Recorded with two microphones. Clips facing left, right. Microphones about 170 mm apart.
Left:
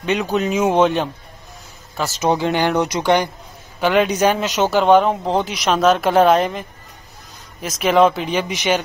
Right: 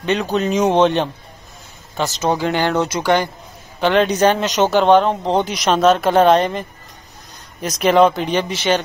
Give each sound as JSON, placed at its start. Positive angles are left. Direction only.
{"t": 0.0, "sound": "a woman's voice", "side_deg": 10}
{"t": 2.1, "sound": "speech", "side_deg": 20}
{"t": 3.8, "sound": "a woman's voice", "side_deg": 10}
{"t": 7.6, "sound": "a woman's voice", "side_deg": 0}